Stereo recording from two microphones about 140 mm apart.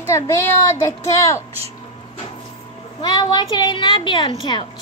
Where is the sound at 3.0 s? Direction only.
30° left (ahead or behind).